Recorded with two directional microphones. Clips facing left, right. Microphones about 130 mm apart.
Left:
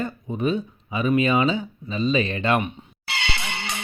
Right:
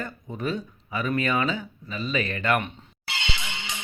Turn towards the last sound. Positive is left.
turn(degrees=65)  # may be behind; listen again after turning